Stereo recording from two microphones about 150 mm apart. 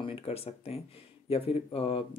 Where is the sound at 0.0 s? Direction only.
40° left (ahead or behind).